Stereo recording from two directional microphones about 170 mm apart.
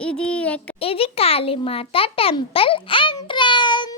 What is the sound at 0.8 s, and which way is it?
A child's voice, 35° left (ahead or behind).